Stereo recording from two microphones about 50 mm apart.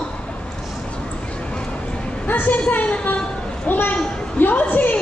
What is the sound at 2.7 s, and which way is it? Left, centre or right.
Speech, left.